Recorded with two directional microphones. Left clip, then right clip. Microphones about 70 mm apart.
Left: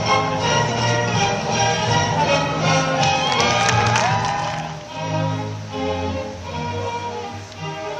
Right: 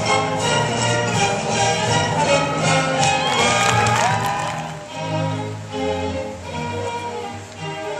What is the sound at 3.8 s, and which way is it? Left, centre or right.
Music, right.